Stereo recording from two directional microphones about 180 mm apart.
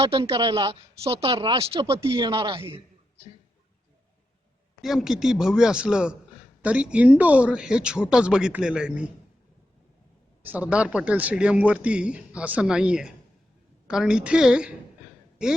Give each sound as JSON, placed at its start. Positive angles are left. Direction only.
{"t": 0.0, "sound": "speech", "side_deg": -30}
{"t": 1.9, "sound": "speech", "side_deg": -15}
{"t": 4.8, "sound": "a man's voice", "side_deg": 0}
{"t": 10.4, "sound": "a man's voice", "side_deg": -10}